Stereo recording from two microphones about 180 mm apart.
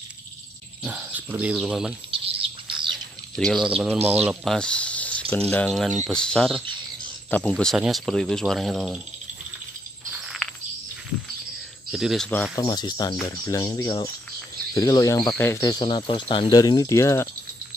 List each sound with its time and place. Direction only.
0.8 s speech: 10° right (ahead or behind)
2.0 s bird: 30° right (ahead or behind)
3.3 s speech: centre (ahead or behind)
10.2 s a sound: centre (ahead or behind)
11.9 s speech: centre (ahead or behind)
12.5 s speech: 25° left (ahead or behind)